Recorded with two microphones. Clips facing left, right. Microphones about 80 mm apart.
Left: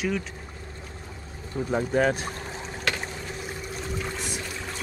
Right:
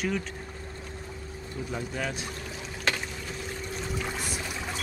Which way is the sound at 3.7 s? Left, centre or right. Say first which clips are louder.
Left 1 dB; centre.